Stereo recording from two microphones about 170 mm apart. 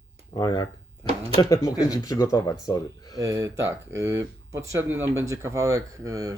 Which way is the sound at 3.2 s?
20° right (ahead or behind).